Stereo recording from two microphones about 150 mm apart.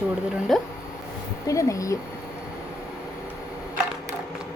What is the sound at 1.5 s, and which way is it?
Speech, 20° left (ahead or behind).